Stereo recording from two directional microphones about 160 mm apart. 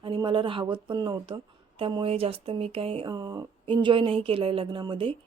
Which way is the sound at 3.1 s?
25° right (ahead or behind).